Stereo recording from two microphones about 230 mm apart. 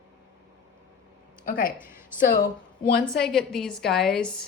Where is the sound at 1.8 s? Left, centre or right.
Centre.